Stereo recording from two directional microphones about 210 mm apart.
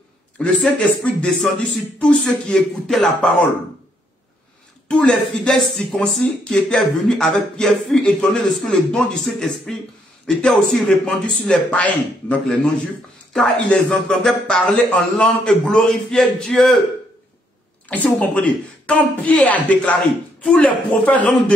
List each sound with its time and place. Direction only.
0.4 s speech: 5° left (ahead or behind)
4.8 s speech: 5° left (ahead or behind)
17.8 s speech: 5° left (ahead or behind)